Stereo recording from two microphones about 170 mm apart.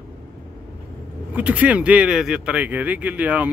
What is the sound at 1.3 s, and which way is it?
Speech, 10° right (ahead or behind).